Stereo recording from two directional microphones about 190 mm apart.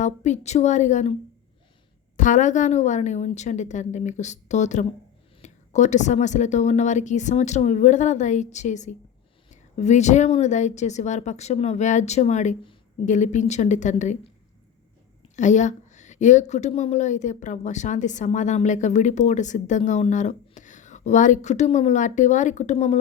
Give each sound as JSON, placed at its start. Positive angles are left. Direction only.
{"t": 0.0, "sound": "a woman's voice", "side_deg": 40}
{"t": 2.1, "sound": "a woman's voice", "side_deg": 40}
{"t": 15.4, "sound": "a woman's voice", "side_deg": 40}